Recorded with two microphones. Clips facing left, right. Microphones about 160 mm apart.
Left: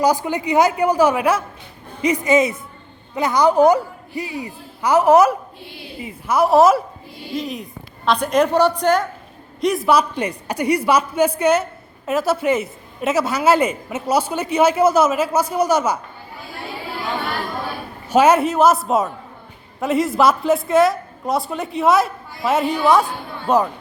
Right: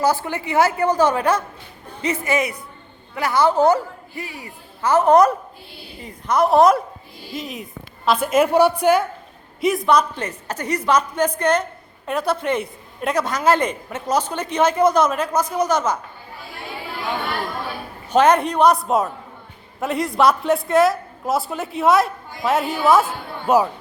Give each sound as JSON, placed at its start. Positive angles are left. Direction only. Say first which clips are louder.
{"t": 0.0, "sound": "a woman's voice", "louder": "left 2 dB", "side_deg": 15}
{"t": 18.1, "sound": "a woman's voice", "louder": "left 2 dB", "side_deg": 5}